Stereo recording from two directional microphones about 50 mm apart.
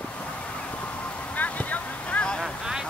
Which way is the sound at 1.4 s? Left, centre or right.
Left.